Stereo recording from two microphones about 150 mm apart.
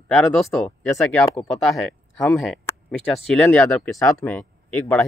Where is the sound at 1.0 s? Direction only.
20° left (ahead or behind).